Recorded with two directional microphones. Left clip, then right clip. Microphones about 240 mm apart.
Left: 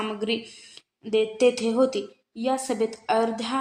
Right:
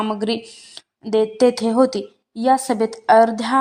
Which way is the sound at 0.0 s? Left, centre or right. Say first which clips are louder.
Right 6 dB; right.